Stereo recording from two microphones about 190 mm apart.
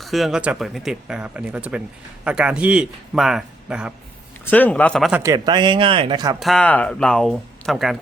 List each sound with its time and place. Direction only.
0.0 s speech: centre (ahead or behind)
4.4 s speech: 10° left (ahead or behind)
5.2 s speech: 20° right (ahead or behind)
6.4 s speech: 5° left (ahead or behind)